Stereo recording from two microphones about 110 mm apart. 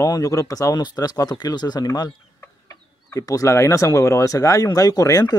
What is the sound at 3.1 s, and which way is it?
Speech, 30° left (ahead or behind).